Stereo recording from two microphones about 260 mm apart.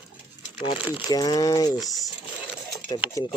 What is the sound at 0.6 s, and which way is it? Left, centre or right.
Speech, centre.